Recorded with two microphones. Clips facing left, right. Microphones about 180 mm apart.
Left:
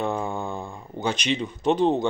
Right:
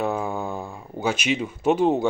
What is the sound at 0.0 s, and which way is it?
Speech, 5° right (ahead or behind).